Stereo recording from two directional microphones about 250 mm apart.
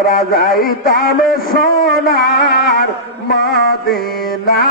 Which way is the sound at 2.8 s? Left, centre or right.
Left.